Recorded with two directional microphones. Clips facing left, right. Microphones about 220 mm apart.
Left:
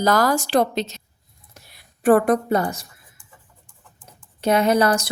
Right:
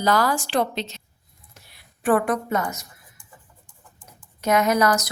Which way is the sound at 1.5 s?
40° left (ahead or behind).